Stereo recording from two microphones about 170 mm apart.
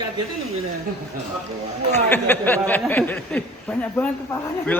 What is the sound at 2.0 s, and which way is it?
A man's voice, 10° left (ahead or behind).